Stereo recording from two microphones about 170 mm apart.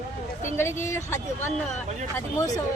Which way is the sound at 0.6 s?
15° left (ahead or behind).